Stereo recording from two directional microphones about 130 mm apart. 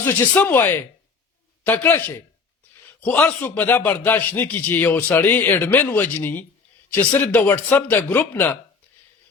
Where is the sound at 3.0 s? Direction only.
15° left (ahead or behind).